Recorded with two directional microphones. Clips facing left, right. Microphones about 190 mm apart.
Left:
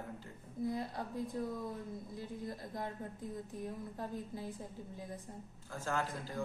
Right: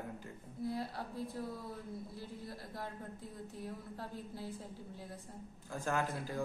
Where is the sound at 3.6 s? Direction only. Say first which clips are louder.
Left 1 dB; 15° left (ahead or behind).